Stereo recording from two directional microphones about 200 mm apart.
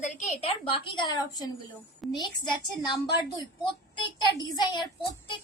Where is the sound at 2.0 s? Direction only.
Centre (ahead or behind).